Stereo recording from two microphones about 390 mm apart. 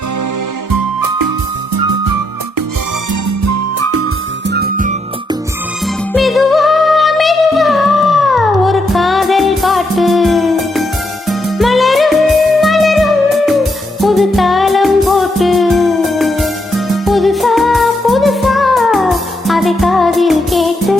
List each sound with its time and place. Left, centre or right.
0.7 s music: right
3.1 s music: right; by 5.4 s centre
6.1 s music: centre